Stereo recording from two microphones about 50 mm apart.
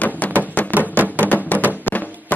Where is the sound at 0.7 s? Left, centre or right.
Right.